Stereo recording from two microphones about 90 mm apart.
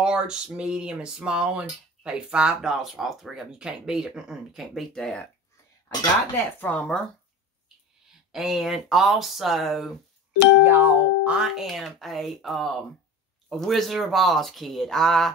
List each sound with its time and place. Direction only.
0.0 s a sound: 10° right (ahead or behind); by 5.3 s 10° left (ahead or behind)
6.3 s speech: 20° left (ahead or behind)
8.3 s speech: 5° right (ahead or behind)
10.6 s speech: 20° right (ahead or behind); by 15.3 s 5° left (ahead or behind)